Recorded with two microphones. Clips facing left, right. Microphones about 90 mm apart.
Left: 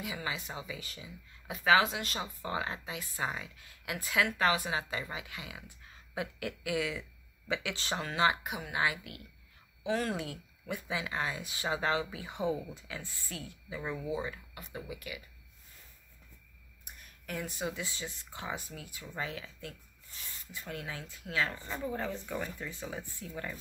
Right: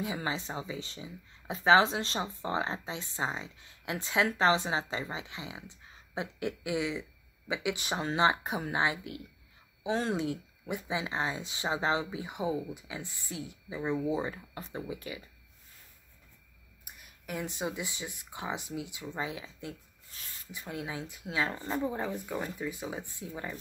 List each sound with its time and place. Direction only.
0.0 s speech: 30° right (ahead or behind); by 8.1 s 15° right (ahead or behind)
8.1 s speech: 30° right (ahead or behind)
8.8 s speech: 25° right (ahead or behind)
16.8 s speech: 10° right (ahead or behind)